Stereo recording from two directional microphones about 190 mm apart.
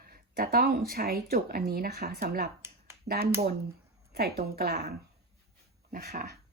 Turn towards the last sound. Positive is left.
turn(degrees=-50)  # may be behind; listen again after turning